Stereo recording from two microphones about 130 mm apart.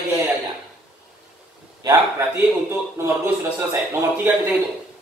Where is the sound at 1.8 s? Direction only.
25° right (ahead or behind).